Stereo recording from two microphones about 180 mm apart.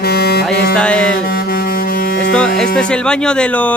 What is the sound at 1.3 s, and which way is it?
Music, 55° left (ahead or behind).